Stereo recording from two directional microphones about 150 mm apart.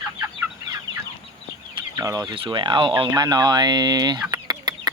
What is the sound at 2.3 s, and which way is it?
Speech, 35° right (ahead or behind).